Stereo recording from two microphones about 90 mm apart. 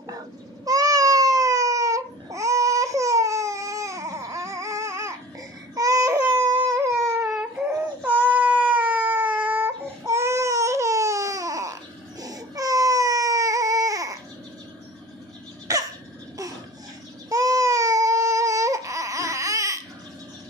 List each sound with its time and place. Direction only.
0.7 s baby cry: 40° right (ahead or behind)
7.2 s baby cry: 10° right (ahead or behind)
10.0 s baby cry: 30° right (ahead or behind)
15.7 s cough: 40° right (ahead or behind)
17.3 s baby cry: 40° right (ahead or behind)